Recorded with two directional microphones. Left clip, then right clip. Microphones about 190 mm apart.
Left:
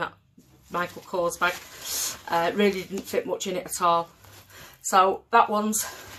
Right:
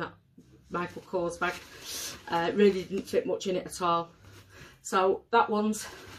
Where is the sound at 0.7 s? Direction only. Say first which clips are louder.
Left 5 dB; 20° right (ahead or behind).